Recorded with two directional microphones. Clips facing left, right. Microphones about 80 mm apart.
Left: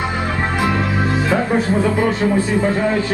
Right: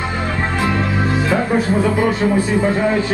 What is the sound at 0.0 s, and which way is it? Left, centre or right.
A man's voice, centre.